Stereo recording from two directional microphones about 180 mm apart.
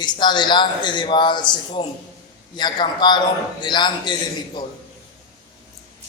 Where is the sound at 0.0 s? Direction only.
25° left (ahead or behind).